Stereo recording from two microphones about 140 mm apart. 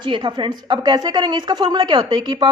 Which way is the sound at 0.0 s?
35° right (ahead or behind).